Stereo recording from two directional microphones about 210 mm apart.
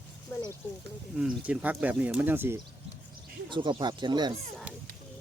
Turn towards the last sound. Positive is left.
turn(degrees=-20)  # may be behind; listen again after turning